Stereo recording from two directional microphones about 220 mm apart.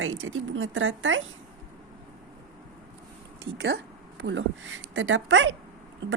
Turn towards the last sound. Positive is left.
turn(degrees=-55)  # may be behind; listen again after turning